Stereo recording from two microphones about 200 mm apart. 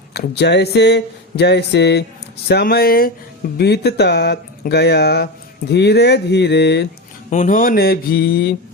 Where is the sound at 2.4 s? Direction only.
50° left (ahead or behind).